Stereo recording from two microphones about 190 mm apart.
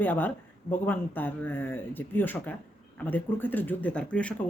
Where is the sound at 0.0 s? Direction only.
10° left (ahead or behind).